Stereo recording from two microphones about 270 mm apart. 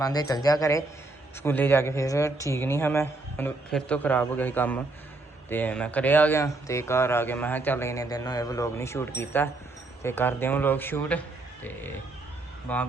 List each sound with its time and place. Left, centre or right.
0.0 s speech: centre